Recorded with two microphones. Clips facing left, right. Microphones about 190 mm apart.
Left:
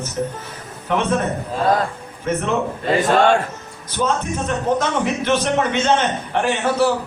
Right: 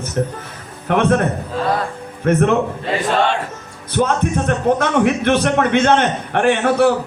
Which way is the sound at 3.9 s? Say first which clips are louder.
Right 4 dB; 60° right (ahead or behind).